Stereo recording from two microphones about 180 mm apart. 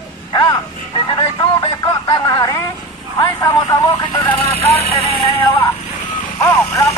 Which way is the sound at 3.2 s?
20° left (ahead or behind).